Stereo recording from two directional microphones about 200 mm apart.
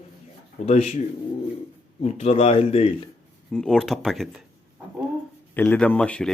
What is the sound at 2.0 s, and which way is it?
Speech, 30° left (ahead or behind).